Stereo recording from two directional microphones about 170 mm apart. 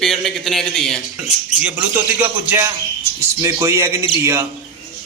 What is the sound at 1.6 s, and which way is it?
A man's voice, 10° right (ahead or behind).